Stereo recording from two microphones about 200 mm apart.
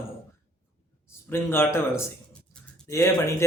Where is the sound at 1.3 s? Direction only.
10° left (ahead or behind).